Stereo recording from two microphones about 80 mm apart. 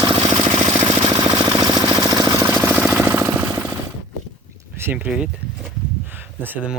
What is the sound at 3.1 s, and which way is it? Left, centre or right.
Jackhammer, right.